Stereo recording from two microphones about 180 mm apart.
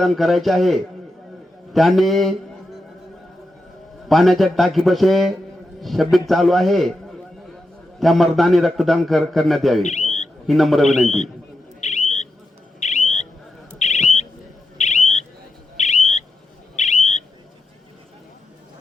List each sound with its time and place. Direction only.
0.0 s a man's voice: centre (ahead or behind)
4.1 s a man's voice: centre (ahead or behind)
7.9 s a man's voice: centre (ahead or behind)
9.8 s a sound: 40° left (ahead or behind)
10.4 s a man's voice: centre (ahead or behind)
11.8 s owl: 40° left (ahead or behind)
12.8 s a sound: 40° left (ahead or behind)
13.7 s smoke detector: 40° left (ahead or behind)
14.8 s bird: 40° left (ahead or behind)
15.8 s owl: 40° left (ahead or behind)